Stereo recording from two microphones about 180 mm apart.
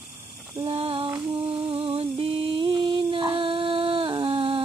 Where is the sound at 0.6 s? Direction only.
30° right (ahead or behind).